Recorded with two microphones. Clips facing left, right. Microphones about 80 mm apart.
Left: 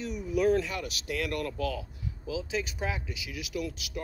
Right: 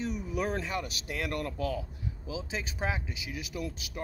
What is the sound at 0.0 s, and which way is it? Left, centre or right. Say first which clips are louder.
Speech: left 5 dB; right.